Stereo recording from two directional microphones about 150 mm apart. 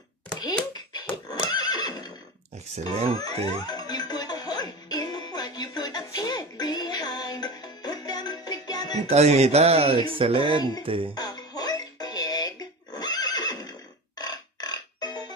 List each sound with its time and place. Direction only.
0.3 s a sound: 25° left (ahead or behind)
1.5 s neigh: 25° left (ahead or behind)
2.9 s speech: 40° right (ahead or behind)
3.4 s music: 25° left (ahead or behind)
9.1 s speech: 45° right (ahead or behind)
11.1 s music: 25° left (ahead or behind)